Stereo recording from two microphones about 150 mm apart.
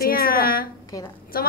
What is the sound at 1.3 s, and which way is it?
Speech, 80° left.